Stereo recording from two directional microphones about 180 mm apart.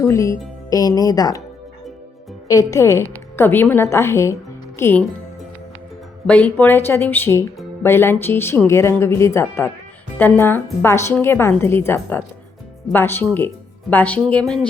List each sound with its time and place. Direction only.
0.0 s speech: 15° left (ahead or behind)
2.5 s speech: 20° left (ahead or behind)
6.2 s speech: 5° left (ahead or behind)